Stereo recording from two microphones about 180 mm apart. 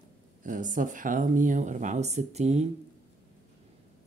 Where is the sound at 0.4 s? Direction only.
45° right (ahead or behind).